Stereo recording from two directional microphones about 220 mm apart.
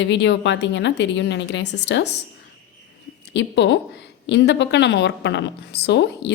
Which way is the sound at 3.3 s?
55° left (ahead or behind).